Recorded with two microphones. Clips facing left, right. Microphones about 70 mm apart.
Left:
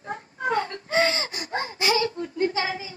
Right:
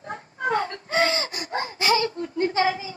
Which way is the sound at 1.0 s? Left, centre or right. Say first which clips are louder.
Right 1 dB; right.